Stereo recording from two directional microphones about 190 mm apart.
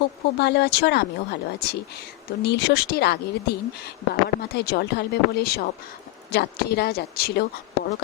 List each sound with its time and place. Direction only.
0.3 s speech: 60° left (ahead or behind)